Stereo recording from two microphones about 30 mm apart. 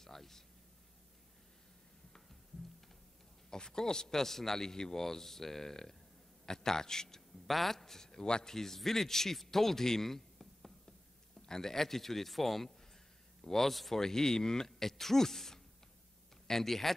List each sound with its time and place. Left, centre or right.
0.0 s a sound: centre
3.4 s a man's voice: left
7.4 s a man's voice: centre; by 8.5 s left
8.5 s a man's voice: centre
13.4 s a sound: centre
13.7 s speech: centre
14.0 s speech: centre
14.8 s a man's voice: centre